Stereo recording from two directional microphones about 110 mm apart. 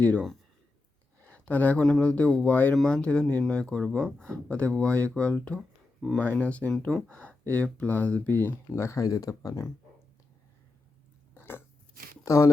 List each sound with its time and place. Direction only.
0.0 s speech: 10° left (ahead or behind); by 9.6 s 30° left (ahead or behind)
11.3 s biting: 20° left (ahead or behind)
12.2 s speech: 30° left (ahead or behind)